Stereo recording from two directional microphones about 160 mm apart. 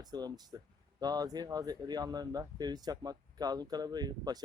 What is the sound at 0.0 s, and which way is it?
Speech, 25° right (ahead or behind).